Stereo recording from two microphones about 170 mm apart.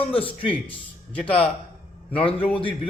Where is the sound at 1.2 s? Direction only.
5° left (ahead or behind).